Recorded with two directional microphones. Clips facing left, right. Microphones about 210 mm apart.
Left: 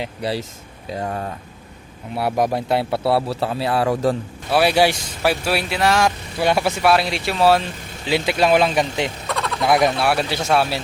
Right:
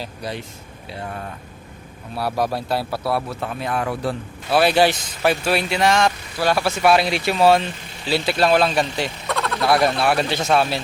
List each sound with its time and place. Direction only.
0.0 s speech: 25° left (ahead or behind)
0.9 s speech: 40° left (ahead or behind)
2.1 s speech: 20° left (ahead or behind); by 4.2 s 40° left (ahead or behind)
4.5 s speech: 10° left (ahead or behind)
6.4 s speech: 20° left (ahead or behind)
6.8 s speech: centre (ahead or behind)
8.0 s speech: 15° left (ahead or behind)
9.2 s a sound: centre (ahead or behind)
9.6 s speech: 15° left (ahead or behind)
9.9 s speech: 5° left (ahead or behind)